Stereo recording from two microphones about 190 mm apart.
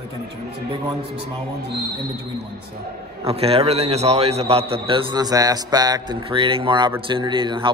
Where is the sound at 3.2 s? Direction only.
30° right (ahead or behind).